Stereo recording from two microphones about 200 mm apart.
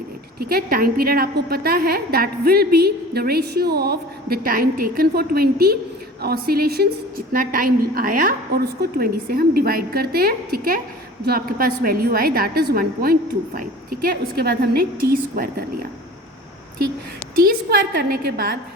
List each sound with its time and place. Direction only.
0.3 s a woman's voice: 50° right (ahead or behind)
17.3 s a woman's voice: 50° right (ahead or behind)